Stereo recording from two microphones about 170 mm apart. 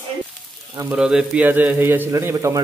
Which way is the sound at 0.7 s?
15° right (ahead or behind).